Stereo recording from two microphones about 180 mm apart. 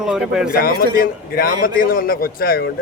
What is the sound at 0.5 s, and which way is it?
A man's voice, 55° left (ahead or behind).